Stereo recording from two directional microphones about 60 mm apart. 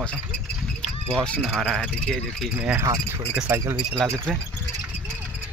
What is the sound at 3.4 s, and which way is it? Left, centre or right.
Speech, right.